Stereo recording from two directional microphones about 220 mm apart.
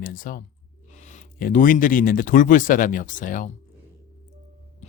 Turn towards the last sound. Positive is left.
turn(degrees=30)  # may be behind; listen again after turning